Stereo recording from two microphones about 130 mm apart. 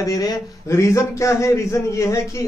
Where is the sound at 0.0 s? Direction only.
25° left (ahead or behind).